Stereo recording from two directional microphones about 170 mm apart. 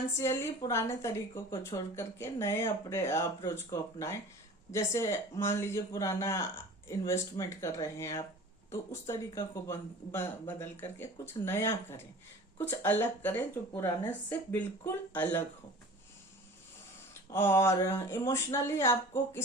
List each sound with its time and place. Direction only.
0.2 s speech: 15° left (ahead or behind)
17.3 s speech: 15° left (ahead or behind)